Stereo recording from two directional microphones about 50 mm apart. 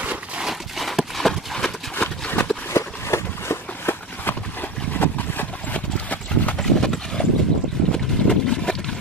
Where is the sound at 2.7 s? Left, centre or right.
Left.